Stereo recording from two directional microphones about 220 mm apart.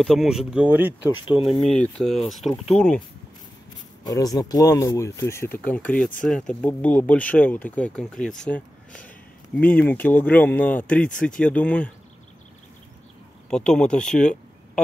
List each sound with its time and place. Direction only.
0.0 s speech: centre (ahead or behind)
1.1 s speech: 20° left (ahead or behind)
1.8 s speech: centre (ahead or behind)
4.0 s speech: 15° left (ahead or behind)
13.5 s speech: 5° left (ahead or behind)